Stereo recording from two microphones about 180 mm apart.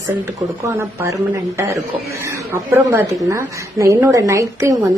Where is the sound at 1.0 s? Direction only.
15° right (ahead or behind).